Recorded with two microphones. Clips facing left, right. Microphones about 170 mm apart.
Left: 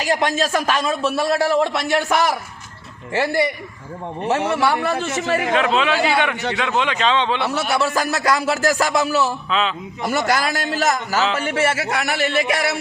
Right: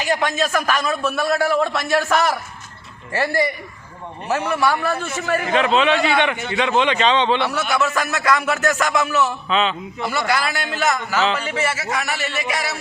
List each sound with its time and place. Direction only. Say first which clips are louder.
0.1 s a man's voice: left 1 dB; 30° left (ahead or behind)
4.3 s a man's voice: left 1 dB; 25° left (ahead or behind)
5.5 s speech: right 3 dB; centre (ahead or behind)
6.3 s speech: left 3 dB; 75° left (ahead or behind)
6.6 s speech: right 4 dB; centre (ahead or behind)
7.4 s a sound: left 1 dB; 30° left (ahead or behind)
9.5 s speech: right 1 dB; centre (ahead or behind)
10.0 s a sound: left 2 dB; 45° left (ahead or behind)
11.4 s a man's voice: left 3 dB; 50° left (ahead or behind)